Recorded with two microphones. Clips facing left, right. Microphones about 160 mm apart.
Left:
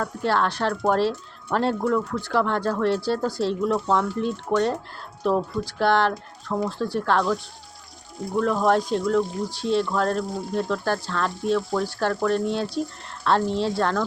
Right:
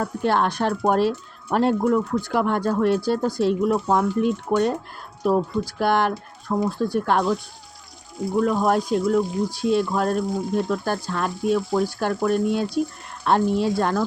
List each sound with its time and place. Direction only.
0.0 s speech: 15° right (ahead or behind)
8.4 s speech: 10° right (ahead or behind)